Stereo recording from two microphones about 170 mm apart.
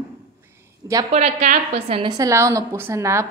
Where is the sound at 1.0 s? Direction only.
40° right (ahead or behind).